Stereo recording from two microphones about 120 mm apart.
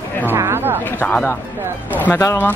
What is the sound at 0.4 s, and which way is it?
Speech, 20° right (ahead or behind).